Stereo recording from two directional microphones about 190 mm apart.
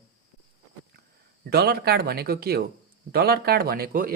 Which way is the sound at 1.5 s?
55° right (ahead or behind).